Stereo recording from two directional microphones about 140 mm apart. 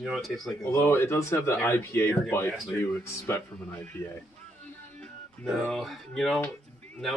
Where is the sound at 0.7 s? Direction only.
20° left (ahead or behind).